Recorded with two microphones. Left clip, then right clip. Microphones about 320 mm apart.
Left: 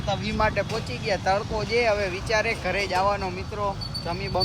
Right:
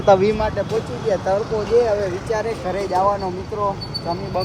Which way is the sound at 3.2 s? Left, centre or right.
Centre.